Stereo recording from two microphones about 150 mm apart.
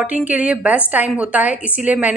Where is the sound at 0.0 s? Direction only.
10° right (ahead or behind).